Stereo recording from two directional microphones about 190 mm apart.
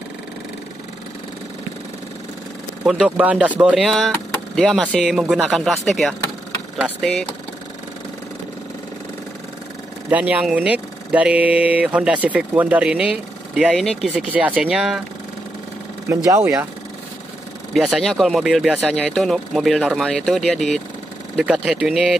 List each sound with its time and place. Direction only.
2.8 s speech: 5° right (ahead or behind)
10.0 s speech: 10° right (ahead or behind)
16.1 s speech: 15° right (ahead or behind)
17.7 s speech: centre (ahead or behind)